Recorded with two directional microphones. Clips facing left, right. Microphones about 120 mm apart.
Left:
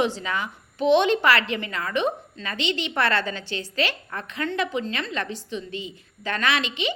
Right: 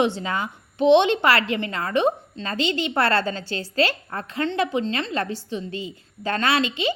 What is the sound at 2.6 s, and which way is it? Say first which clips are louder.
Speech: right 3 dB; 25° left (ahead or behind).